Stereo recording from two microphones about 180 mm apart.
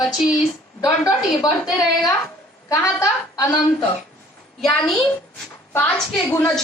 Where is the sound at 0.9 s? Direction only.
20° left (ahead or behind).